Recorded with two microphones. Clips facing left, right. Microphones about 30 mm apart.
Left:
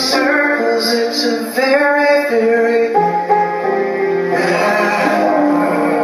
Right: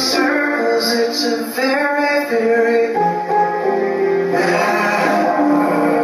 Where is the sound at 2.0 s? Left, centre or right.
Centre.